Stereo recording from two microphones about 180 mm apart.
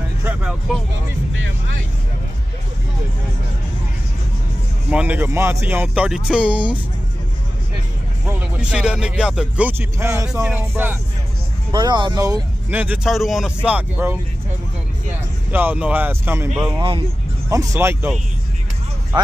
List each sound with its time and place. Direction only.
0.2 s speech: 10° right (ahead or behind)
4.9 s speech: 10° right (ahead or behind)
8.3 s speech: 5° right (ahead or behind)
11.7 s speech: 25° right (ahead or behind)
12.7 s speech: 10° right (ahead or behind)
15.5 s speech: 10° right (ahead or behind)